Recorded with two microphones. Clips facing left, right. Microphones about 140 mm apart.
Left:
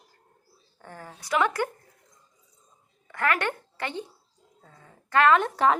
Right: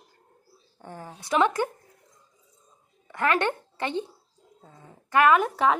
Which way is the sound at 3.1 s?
25° right (ahead or behind).